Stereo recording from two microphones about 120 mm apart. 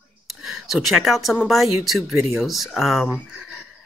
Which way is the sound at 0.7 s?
Centre (ahead or behind).